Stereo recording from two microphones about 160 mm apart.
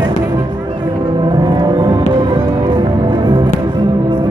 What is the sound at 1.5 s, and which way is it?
Music, 30° right (ahead or behind).